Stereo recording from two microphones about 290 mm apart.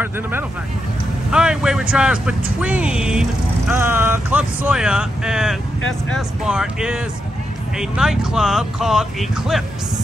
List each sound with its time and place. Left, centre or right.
0.0 s speech: centre
5.8 s speech: left
6.1 s speech: centre